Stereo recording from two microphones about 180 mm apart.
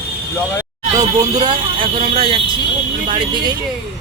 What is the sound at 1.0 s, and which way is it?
Speech, 20° right (ahead or behind).